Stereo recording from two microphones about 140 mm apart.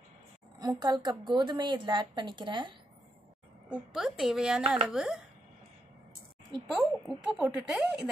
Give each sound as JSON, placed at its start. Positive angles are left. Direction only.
{"t": 0.6, "sound": "a woman's voice", "side_deg": -30}
{"t": 3.6, "sound": "speech", "side_deg": -5}
{"t": 6.7, "sound": "speech", "side_deg": 0}